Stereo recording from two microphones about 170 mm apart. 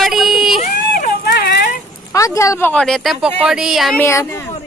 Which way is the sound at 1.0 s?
60° left (ahead or behind).